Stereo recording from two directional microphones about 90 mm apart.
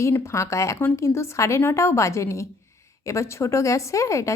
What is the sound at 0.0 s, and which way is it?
Speech, 30° left (ahead or behind).